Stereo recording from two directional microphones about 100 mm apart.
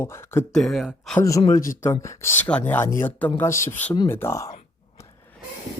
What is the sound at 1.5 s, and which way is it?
Speech, 35° left (ahead or behind).